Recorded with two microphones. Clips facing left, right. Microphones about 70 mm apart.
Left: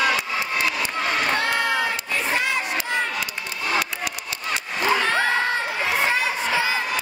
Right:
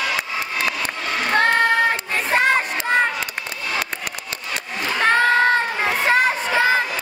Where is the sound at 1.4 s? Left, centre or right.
Right.